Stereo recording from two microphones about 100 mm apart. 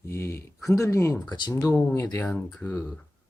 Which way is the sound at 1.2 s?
50° left (ahead or behind).